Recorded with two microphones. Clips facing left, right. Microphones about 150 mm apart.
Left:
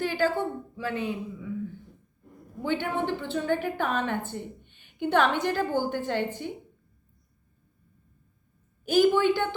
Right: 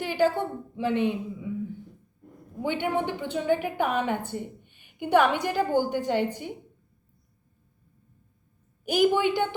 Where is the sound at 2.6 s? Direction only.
15° right (ahead or behind).